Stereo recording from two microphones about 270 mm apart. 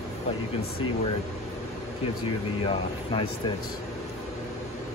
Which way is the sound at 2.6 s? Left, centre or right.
Centre.